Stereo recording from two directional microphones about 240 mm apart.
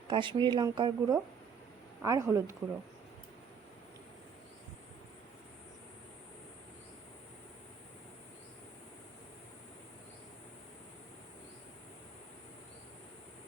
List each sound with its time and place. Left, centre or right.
0.1 s a woman's voice: centre